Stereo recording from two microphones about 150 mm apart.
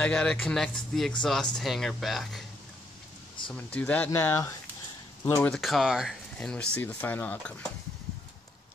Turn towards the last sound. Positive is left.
turn(degrees=10)  # may be behind; listen again after turning